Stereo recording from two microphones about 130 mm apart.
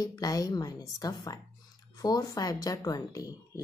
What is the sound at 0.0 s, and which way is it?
Speech, 30° left (ahead or behind).